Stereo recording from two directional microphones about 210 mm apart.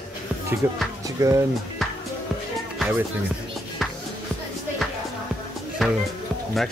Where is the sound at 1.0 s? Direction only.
15° right (ahead or behind).